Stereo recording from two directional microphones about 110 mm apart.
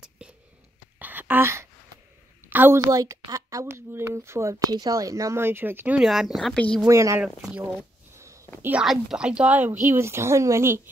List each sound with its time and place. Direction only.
0.9 s a sound: 15° right (ahead or behind)
2.5 s a woman's voice: 20° right (ahead or behind)
2.8 s speech: 30° right (ahead or behind)
5.9 s speech: 5° right (ahead or behind)
6.9 s speech: 25° right (ahead or behind)
7.5 s speech: 10° right (ahead or behind)
9.1 s speech: 10° right (ahead or behind); by 10.8 s 25° right (ahead or behind)